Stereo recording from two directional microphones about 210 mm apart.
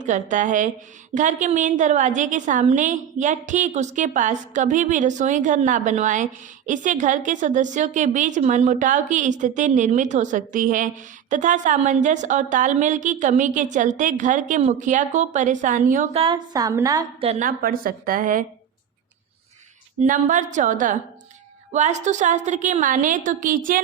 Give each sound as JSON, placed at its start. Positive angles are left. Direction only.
{"t": 0.0, "sound": "a woman's voice", "side_deg": -35}
{"t": 16.2, "sound": "a woman's voice", "side_deg": -20}
{"t": 17.2, "sound": "a woman's voice", "side_deg": -30}
{"t": 17.6, "sound": "a woman's voice", "side_deg": -40}
{"t": 20.0, "sound": "a woman's voice", "side_deg": -35}